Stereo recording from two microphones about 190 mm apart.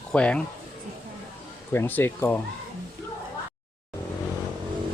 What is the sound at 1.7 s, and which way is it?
Speech, 10° left (ahead or behind).